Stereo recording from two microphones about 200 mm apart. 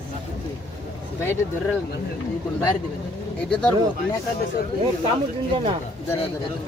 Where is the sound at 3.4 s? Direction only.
5° left (ahead or behind).